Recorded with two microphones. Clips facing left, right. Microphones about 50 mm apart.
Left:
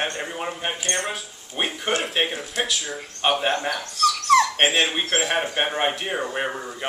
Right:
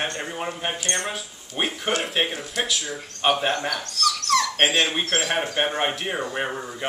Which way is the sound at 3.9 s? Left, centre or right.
Centre.